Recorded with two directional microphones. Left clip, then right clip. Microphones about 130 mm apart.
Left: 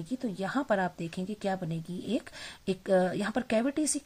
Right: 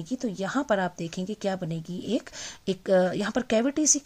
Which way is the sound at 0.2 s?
35° right (ahead or behind).